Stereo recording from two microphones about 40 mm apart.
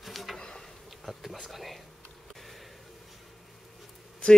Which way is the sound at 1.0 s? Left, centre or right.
Centre.